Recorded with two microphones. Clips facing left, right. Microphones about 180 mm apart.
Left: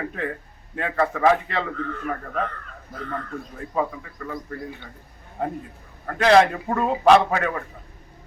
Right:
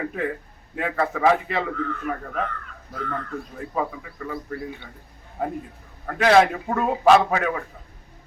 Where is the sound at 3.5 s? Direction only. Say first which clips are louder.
Left 2 dB; 5° right (ahead or behind).